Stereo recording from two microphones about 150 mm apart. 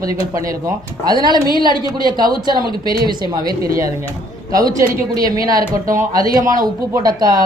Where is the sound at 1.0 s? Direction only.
30° right (ahead or behind).